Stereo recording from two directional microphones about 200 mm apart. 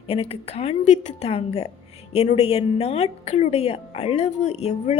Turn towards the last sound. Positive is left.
turn(degrees=30)  # may be behind; listen again after turning